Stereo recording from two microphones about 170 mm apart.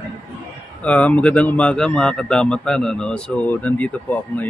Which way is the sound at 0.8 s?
10° left (ahead or behind).